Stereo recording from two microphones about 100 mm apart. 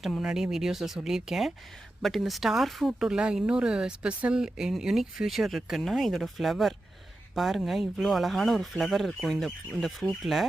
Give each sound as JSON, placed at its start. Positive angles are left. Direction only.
{"t": 0.0, "sound": "speech", "side_deg": -5}